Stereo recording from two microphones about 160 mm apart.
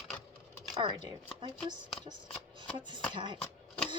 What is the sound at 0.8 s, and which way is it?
Speech, 30° right (ahead or behind).